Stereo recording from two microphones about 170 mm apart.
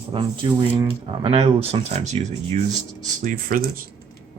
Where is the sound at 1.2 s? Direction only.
35° right (ahead or behind).